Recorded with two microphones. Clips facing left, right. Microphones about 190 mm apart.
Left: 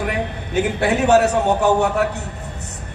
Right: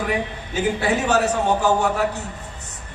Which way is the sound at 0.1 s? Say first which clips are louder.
Left 2 dB; 60° left (ahead or behind).